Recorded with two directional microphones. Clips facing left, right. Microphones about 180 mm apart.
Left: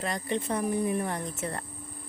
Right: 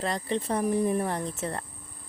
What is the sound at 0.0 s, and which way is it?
Speech, 30° right (ahead or behind).